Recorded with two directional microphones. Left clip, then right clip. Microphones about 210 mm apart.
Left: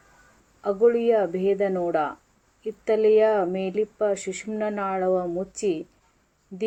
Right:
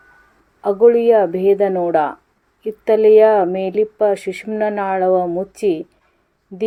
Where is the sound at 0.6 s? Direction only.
15° right (ahead or behind).